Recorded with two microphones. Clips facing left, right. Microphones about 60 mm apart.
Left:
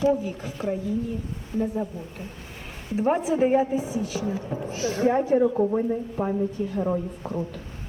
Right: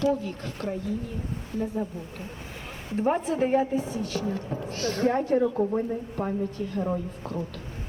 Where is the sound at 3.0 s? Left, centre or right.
Centre.